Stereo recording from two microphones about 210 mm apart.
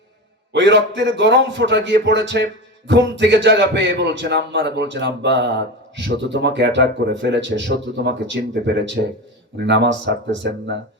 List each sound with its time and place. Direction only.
0.5 s a man's voice: 55° right (ahead or behind)